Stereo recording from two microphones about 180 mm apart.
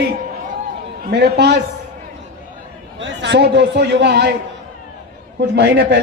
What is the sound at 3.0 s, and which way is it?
A man's voice, 80° right.